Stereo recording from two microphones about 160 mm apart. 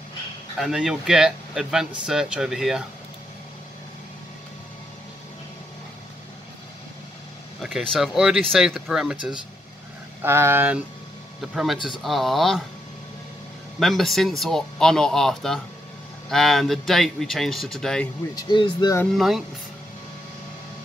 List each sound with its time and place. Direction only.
0.6 s speech: 5° right (ahead or behind)
7.6 s speech: centre (ahead or behind)
11.5 s speech: centre (ahead or behind)
13.7 s speech: centre (ahead or behind)
18.3 s speech: 30° left (ahead or behind)
19.0 s speech: centre (ahead or behind)